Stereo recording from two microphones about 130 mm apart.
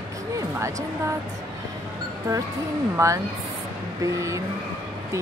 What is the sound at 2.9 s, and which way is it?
Speech, 25° right (ahead or behind).